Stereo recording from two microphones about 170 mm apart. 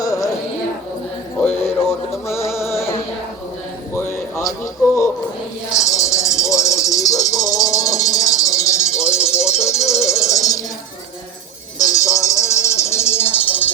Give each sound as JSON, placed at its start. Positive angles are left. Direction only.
{"t": 0.0, "sound": "music", "side_deg": 20}
{"t": 1.4, "sound": "music", "side_deg": 15}
{"t": 3.9, "sound": "a sound", "side_deg": 15}
{"t": 5.7, "sound": "music", "side_deg": 20}
{"t": 11.8, "sound": "music", "side_deg": 20}